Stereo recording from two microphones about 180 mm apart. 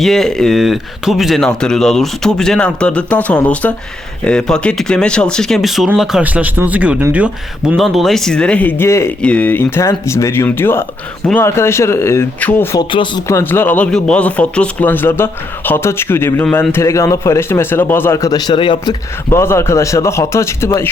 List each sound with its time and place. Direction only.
0.0 s speech: centre (ahead or behind)
12.9 s speech: 25° left (ahead or behind)
13.2 s speech: 15° left (ahead or behind)
19.3 s speech: 15° left (ahead or behind)